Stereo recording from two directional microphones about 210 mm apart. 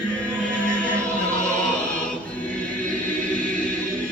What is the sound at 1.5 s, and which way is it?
Choir, 5° left (ahead or behind).